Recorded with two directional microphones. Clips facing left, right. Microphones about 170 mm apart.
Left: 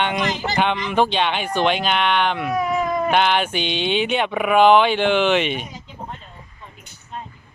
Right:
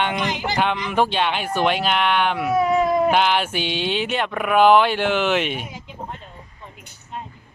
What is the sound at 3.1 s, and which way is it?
Speech, 5° right (ahead or behind).